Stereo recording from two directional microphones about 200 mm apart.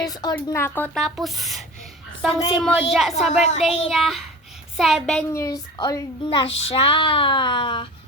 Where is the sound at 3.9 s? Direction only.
Centre (ahead or behind).